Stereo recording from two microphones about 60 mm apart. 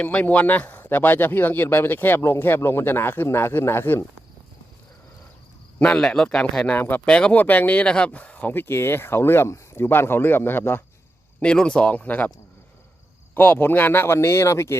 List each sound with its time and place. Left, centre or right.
0.0 s speech: left
5.8 s speech: centre
6.7 s speech: left
7.1 s speech: centre
7.3 s speech: left
11.3 s speech: centre
13.3 s speech: left
14.2 s speech: left